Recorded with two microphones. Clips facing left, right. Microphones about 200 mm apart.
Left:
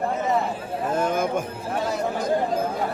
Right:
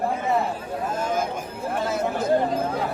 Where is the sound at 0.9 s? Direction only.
55° left (ahead or behind).